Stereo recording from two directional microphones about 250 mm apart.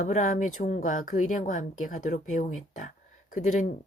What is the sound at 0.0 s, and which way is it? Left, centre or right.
Speech, left.